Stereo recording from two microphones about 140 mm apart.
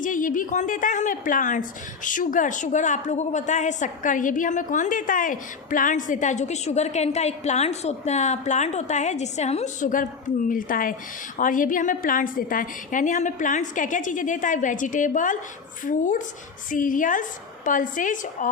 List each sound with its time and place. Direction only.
0.0 s a woman's voice: 70° left (ahead or behind); by 9.7 s 50° left (ahead or behind)
9.8 s a woman's voice: 70° left (ahead or behind)
10.5 s a woman's voice: 80° left